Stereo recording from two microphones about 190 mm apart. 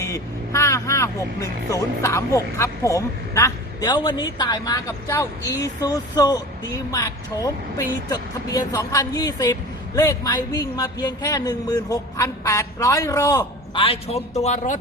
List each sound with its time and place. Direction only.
0.0 s speech: 15° left (ahead or behind); by 14.8 s 40° left (ahead or behind)